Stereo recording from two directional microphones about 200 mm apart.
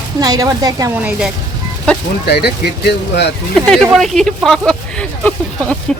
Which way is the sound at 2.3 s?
55° left (ahead or behind).